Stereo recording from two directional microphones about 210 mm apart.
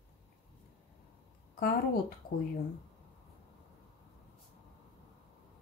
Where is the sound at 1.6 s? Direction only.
45° left (ahead or behind).